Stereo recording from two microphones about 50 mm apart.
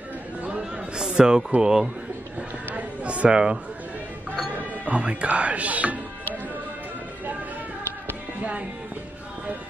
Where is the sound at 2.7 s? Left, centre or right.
Right.